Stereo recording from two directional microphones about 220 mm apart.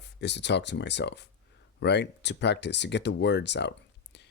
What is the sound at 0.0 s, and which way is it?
Speech, 50° left (ahead or behind).